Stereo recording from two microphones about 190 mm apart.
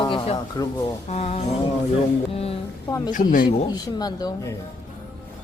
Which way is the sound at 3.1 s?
45° left (ahead or behind).